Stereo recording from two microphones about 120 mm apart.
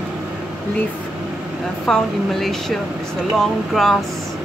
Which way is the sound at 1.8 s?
5° left (ahead or behind).